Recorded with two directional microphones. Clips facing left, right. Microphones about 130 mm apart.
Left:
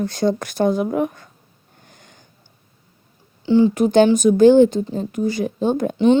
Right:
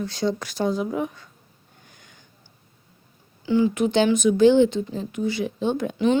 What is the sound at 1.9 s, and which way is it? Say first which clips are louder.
Sniff: left 5 dB; 45° left (ahead or behind).